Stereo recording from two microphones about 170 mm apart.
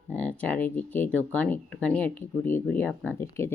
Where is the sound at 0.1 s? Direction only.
10° left (ahead or behind).